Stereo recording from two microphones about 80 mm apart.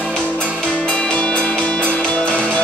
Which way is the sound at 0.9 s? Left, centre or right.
Centre.